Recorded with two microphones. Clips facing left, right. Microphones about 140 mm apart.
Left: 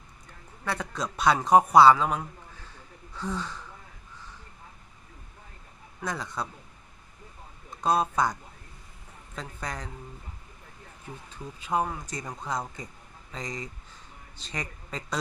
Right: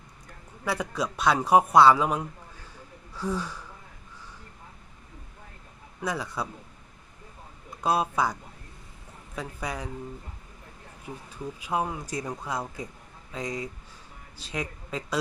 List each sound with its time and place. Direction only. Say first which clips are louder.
0.6 s speech: right 3 dB; 10° right (ahead or behind)
6.0 s speech: right 2 dB; 5° right (ahead or behind)
7.8 s speech: even; 10° right (ahead or behind)
11.3 s speech: even; 10° right (ahead or behind)